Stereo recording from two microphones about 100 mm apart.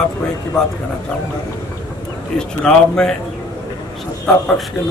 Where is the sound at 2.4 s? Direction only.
10° left (ahead or behind).